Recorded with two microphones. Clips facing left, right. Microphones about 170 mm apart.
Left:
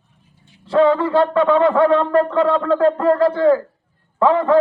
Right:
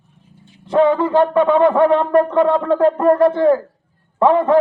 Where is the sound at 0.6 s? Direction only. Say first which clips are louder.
Even; 20° right (ahead or behind).